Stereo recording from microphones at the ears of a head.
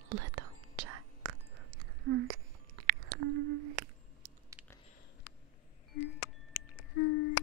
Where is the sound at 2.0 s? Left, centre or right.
Right.